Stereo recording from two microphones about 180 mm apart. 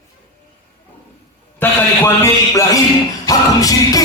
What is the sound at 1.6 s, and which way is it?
Speech, 10° left (ahead or behind).